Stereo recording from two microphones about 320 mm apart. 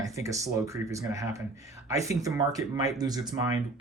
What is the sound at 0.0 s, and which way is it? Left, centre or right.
Speech, centre.